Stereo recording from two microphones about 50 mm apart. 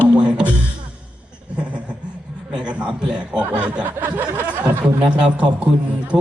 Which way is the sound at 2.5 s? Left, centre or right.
Right.